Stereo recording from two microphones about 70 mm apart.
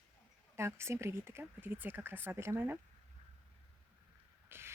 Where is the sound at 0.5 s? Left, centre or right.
Right.